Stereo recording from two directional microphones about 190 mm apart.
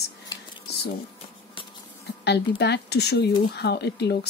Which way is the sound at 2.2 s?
60° left (ahead or behind).